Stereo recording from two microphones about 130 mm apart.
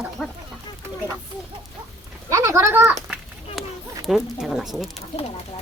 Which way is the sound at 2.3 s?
25° right (ahead or behind).